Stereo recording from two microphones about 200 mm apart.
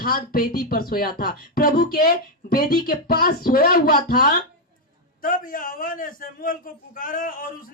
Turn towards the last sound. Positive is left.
turn(degrees=45)  # may be behind; listen again after turning